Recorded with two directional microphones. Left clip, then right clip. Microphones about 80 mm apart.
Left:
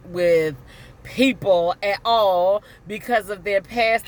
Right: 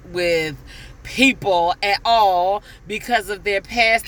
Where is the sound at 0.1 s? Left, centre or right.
Left.